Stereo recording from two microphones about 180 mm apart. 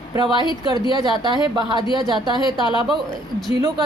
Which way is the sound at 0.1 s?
25° right (ahead or behind).